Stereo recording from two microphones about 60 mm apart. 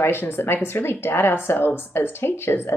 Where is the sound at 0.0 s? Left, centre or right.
Left.